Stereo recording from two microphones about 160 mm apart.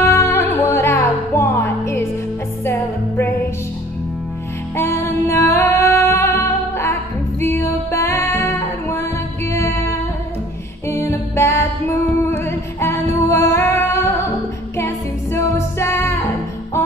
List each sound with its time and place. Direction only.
0.0 s music: 15° left (ahead or behind)
4.7 s music: 15° left (ahead or behind)